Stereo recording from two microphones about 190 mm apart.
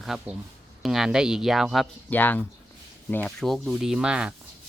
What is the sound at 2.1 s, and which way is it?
Speech, 10° left (ahead or behind).